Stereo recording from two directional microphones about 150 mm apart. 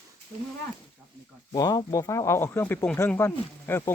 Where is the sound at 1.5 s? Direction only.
25° left (ahead or behind).